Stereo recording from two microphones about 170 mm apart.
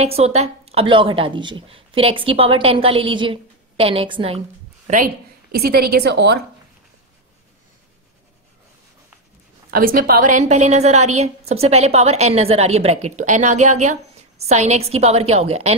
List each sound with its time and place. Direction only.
0.0 s a woman's voice: 40° right (ahead or behind)
4.8 s a woman's voice: 55° right (ahead or behind); by 6.4 s 75° right (ahead or behind)
9.7 s a woman's voice: 55° right (ahead or behind); by 15.7 s 40° right (ahead or behind)